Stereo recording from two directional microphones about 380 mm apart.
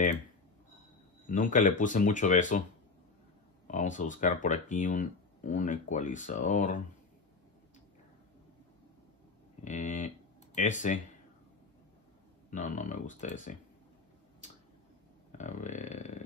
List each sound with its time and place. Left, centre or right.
1.3 s speech: centre
3.6 s speech: centre
9.7 s speech: centre
12.4 s speech: centre
15.3 s speech: centre